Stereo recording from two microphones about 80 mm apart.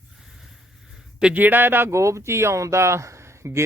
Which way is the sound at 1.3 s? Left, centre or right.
Right.